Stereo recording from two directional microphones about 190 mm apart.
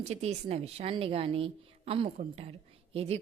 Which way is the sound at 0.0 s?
35° right (ahead or behind).